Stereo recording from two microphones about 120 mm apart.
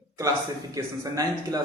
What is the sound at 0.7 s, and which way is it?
Speech, 30° right (ahead or behind).